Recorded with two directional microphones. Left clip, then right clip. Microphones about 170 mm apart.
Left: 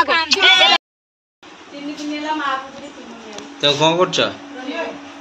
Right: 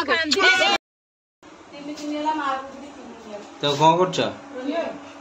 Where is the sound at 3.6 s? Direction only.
10° right (ahead or behind).